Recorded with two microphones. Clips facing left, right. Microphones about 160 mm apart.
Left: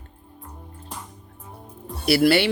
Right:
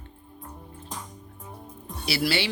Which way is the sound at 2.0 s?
55° left (ahead or behind).